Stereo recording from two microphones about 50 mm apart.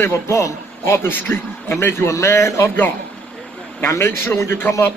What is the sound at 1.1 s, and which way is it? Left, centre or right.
Speech, left.